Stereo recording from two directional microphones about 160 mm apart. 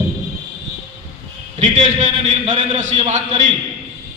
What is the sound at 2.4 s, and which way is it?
Speech, 50° right (ahead or behind).